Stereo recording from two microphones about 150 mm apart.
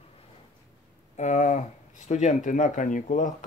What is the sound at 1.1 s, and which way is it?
Speech, 50° left (ahead or behind).